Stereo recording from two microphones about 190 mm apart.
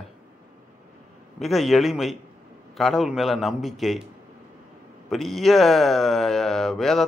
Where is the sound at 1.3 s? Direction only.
Centre (ahead or behind).